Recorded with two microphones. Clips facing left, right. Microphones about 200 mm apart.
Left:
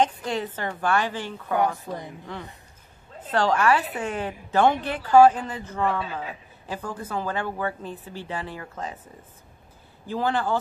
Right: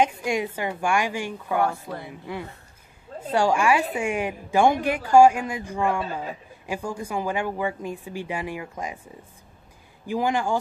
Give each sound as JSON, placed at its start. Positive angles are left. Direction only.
{"t": 0.0, "sound": "a woman's voice", "side_deg": -10}
{"t": 1.6, "sound": "speech", "side_deg": 15}
{"t": 2.0, "sound": "a woman's voice", "side_deg": -10}